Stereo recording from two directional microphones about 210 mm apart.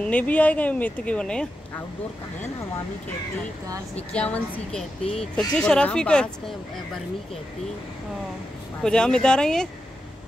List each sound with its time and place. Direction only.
0.0 s speech: 5° left (ahead or behind)
3.9 s a woman's voice: 5° left (ahead or behind)
5.0 s speech: 30° left (ahead or behind)
5.6 s a woman's voice: 5° left (ahead or behind)
8.8 s a woman's voice: 5° left (ahead or behind)